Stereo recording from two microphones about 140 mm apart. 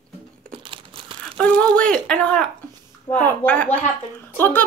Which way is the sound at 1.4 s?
10° left (ahead or behind).